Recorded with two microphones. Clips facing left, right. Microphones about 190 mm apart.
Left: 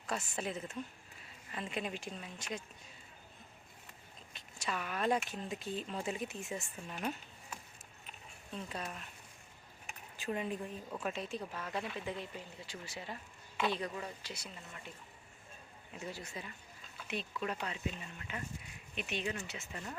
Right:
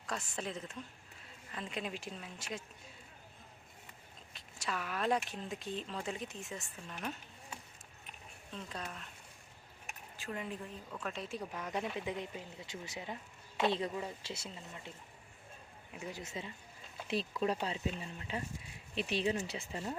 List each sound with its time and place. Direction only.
0.1 s speech: 5° left (ahead or behind)
4.4 s speech: centre (ahead or behind)
8.5 s speech: 10° left (ahead or behind)
10.2 s a woman's voice: 20° left (ahead or behind)
11.0 s speech: 5° left (ahead or behind)
11.3 s speech: 15° right (ahead or behind)
16.0 s speech: 10° right (ahead or behind)
16.2 s speech: 25° right (ahead or behind)
17.1 s speech: 35° right (ahead or behind)